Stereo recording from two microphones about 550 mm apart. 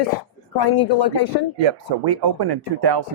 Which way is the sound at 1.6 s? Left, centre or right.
Right.